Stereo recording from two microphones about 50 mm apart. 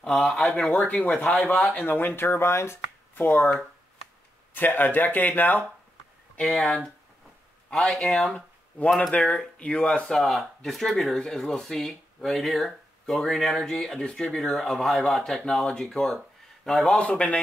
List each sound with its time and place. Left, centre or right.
0.2 s speech: centre
0.8 s speech: left
1.8 s speech: left
3.2 s speech: left
4.6 s speech: left
6.4 s speech: centre
10.1 s speech: centre
15.6 s speech: centre
17.0 s speech: left